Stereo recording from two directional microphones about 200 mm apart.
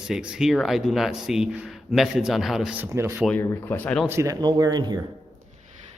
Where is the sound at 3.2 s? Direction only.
10° left (ahead or behind).